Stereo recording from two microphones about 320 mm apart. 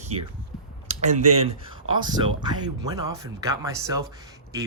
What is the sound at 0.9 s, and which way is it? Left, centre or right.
Speech, right.